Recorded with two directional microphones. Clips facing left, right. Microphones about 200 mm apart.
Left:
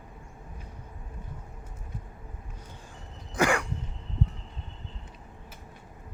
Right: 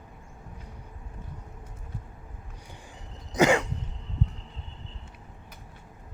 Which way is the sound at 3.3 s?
20° right (ahead or behind).